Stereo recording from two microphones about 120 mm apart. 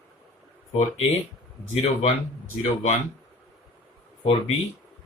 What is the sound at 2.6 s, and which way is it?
Speech, 65° left (ahead or behind).